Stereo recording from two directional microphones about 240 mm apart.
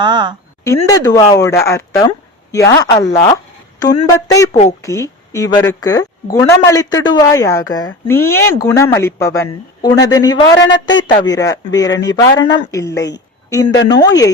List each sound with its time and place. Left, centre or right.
0.0 s a woman's voice: centre
0.9 s speech: centre